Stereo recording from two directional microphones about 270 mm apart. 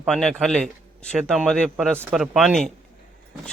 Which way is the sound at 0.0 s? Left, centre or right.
Centre.